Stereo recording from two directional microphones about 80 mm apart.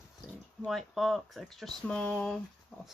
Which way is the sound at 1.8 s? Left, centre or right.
Centre.